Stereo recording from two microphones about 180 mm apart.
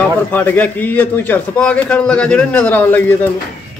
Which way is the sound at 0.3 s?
10° left (ahead or behind).